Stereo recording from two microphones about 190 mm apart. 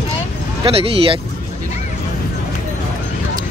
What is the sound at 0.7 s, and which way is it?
Speech, 30° right (ahead or behind).